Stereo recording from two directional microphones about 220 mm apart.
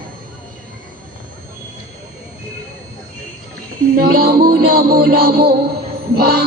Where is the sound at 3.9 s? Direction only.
40° right (ahead or behind).